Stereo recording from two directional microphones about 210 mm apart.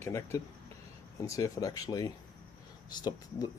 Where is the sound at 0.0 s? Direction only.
15° left (ahead or behind).